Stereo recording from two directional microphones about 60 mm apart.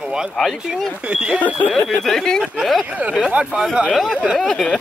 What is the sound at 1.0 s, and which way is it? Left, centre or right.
Speech, centre.